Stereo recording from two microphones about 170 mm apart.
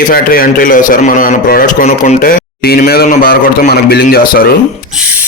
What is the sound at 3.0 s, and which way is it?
Speech, 55° left (ahead or behind).